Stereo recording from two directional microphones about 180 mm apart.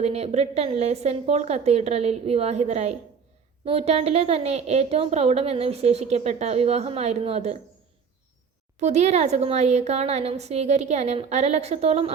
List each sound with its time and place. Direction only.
0.0 s a woman's voice: 35° right (ahead or behind)
8.8 s a woman's voice: 40° right (ahead or behind)